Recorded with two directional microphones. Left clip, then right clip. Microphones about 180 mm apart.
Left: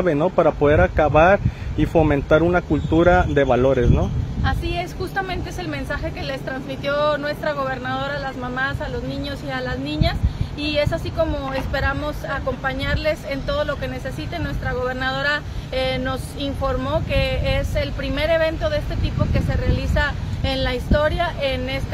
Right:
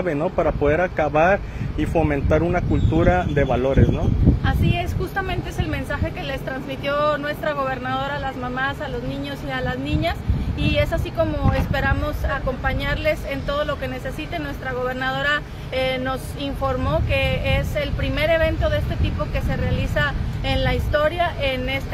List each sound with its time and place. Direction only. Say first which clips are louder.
0.0 s speech: left 4 dB; 35° left (ahead or behind)
4.5 s speech: even; 10° left (ahead or behind)